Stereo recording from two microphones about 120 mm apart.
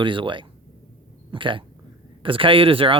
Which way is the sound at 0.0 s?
45° right (ahead or behind).